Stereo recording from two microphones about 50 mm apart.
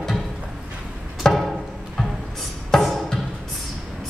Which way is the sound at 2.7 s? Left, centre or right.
Centre.